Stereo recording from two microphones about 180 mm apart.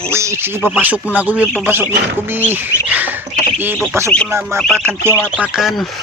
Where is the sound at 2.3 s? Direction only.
10° right (ahead or behind).